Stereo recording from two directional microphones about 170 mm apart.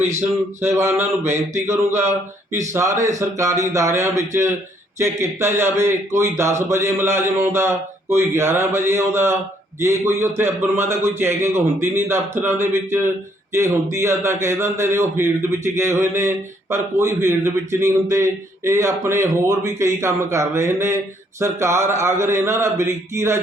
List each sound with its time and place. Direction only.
0.2 s a man's voice: 15° right (ahead or behind)